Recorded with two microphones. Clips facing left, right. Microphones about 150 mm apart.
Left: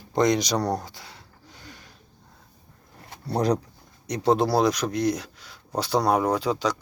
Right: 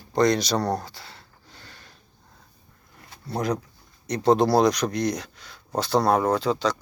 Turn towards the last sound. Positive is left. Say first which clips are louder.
# right 1 dB
turn(degrees=10)  # may be behind; listen again after turning